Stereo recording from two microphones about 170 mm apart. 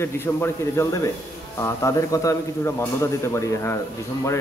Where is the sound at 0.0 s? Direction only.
15° left (ahead or behind).